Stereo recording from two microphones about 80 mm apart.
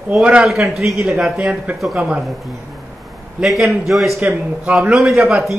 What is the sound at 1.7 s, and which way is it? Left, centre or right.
Speech, centre.